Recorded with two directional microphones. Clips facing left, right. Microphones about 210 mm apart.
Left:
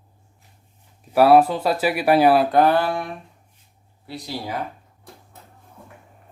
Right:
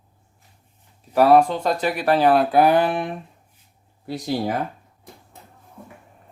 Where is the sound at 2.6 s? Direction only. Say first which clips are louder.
Right 1 dB; 15° right (ahead or behind).